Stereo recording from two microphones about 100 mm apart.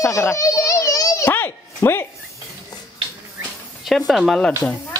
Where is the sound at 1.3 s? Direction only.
25° left (ahead or behind).